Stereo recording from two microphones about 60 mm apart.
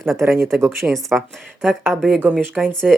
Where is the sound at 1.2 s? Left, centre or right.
Centre.